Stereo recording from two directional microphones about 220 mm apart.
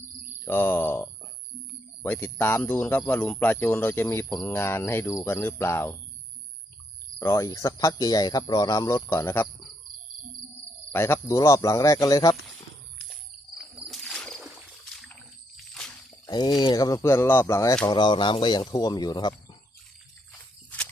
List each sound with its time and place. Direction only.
0.4 s speech: 10° left (ahead or behind)
7.2 s speech: 15° left (ahead or behind)
10.9 s speech: 10° left (ahead or behind)
13.6 s a sound: centre (ahead or behind)
16.2 s speech: 20° left (ahead or behind)
20.3 s walk: 5° left (ahead or behind)